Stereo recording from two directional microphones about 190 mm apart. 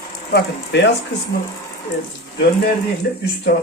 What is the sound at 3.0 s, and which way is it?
Speech, 55° left (ahead or behind).